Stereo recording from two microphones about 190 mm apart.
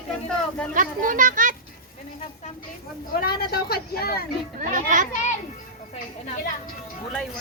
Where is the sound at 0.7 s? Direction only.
45° right (ahead or behind).